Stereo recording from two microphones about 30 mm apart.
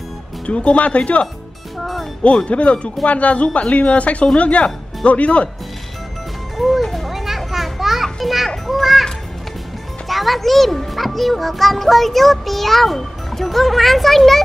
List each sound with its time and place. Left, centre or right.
0.5 s speech: left
2.5 s speech: left
6.5 s music: centre
7.8 s children playing: centre
10.0 s a child's voice: centre